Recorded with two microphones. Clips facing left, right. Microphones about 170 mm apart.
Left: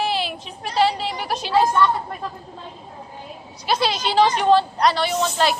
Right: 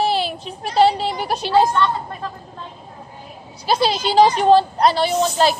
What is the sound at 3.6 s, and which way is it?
Speech, 35° right (ahead or behind).